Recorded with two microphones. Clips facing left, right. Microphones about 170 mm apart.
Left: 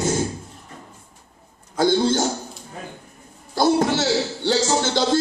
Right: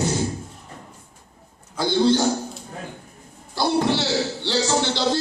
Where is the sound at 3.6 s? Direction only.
45° left (ahead or behind).